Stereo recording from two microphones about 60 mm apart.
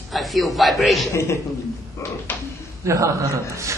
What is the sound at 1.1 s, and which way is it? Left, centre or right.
Speech, left.